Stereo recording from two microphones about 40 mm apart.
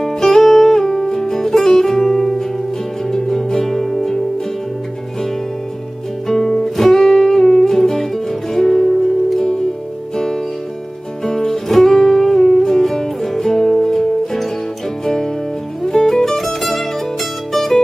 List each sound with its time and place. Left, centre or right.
0.0 s music: centre
6.2 s music: centre
15.8 s music: centre